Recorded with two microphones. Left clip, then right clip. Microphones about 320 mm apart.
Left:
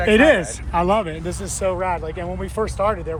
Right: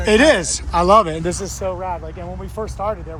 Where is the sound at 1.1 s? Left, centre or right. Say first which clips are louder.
Right 6 dB; right.